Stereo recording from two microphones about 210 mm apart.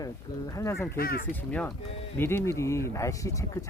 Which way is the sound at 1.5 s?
5° left (ahead or behind).